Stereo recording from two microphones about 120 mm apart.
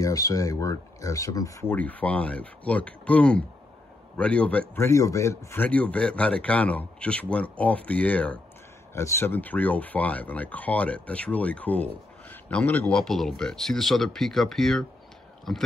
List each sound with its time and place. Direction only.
0.0 s speech: 30° left (ahead or behind)
1.7 s speech: 10° left (ahead or behind)
4.8 s speech: 25° left (ahead or behind)
8.9 s speech: 20° left (ahead or behind); by 14.9 s 5° left (ahead or behind)